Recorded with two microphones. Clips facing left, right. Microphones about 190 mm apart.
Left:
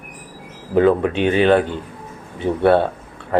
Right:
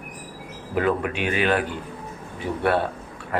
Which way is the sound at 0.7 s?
30° left (ahead or behind).